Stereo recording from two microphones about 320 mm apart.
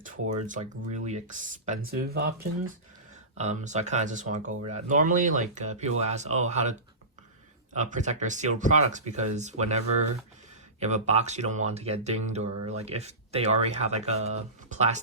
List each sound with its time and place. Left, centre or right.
0.0 s speech: right
3.3 s speech: right